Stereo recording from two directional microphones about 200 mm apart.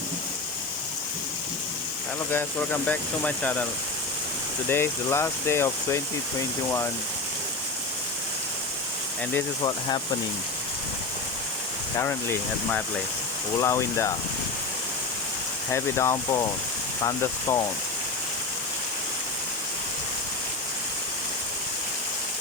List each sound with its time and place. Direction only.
2.8 s speech: 5° left (ahead or behind)
4.7 s speech: 15° left (ahead or behind)
11.9 s speech: 10° left (ahead or behind)
15.7 s speech: 15° left (ahead or behind)